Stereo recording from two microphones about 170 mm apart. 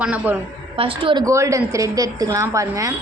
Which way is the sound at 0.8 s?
30° right (ahead or behind).